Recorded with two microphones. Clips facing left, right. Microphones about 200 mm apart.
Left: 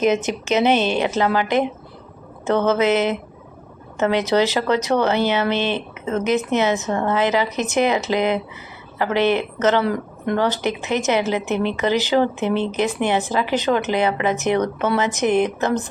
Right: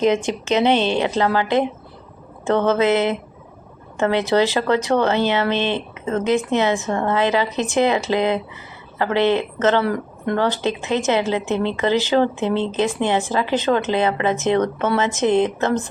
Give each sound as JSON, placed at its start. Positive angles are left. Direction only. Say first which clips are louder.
{"t": 0.0, "sound": "a woman's voice", "louder": "right 1 dB", "side_deg": 20}
{"t": 0.8, "sound": "speech", "louder": "right 1 dB", "side_deg": -20}
{"t": 1.0, "sound": "speech", "louder": "even", "side_deg": 20}
{"t": 2.6, "sound": "speech", "louder": "even", "side_deg": 20}
{"t": 3.9, "sound": "a woman's voice", "louder": "even", "side_deg": 20}
{"t": 5.1, "sound": "speech", "louder": "even", "side_deg": -20}
{"t": 6.1, "sound": "a woman's voice", "louder": "right 1 dB", "side_deg": 20}
{"t": 15.3, "sound": "speech", "louder": "right 1 dB", "side_deg": -20}
{"t": 15.6, "sound": "speech", "louder": "right 1 dB", "side_deg": 20}